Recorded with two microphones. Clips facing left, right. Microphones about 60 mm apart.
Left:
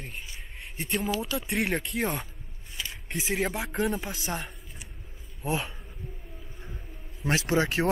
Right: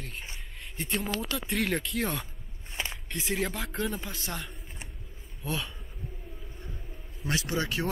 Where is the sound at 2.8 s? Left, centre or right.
Right.